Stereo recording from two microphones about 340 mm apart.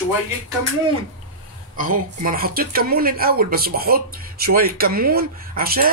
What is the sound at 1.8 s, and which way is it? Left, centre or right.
Speech, right.